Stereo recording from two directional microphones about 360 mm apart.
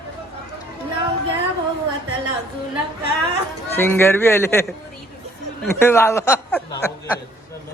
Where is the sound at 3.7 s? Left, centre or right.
Centre.